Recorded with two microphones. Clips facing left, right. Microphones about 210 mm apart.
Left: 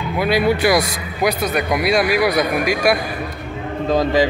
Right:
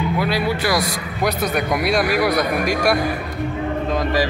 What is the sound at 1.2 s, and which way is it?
A man's voice, 5° left (ahead or behind).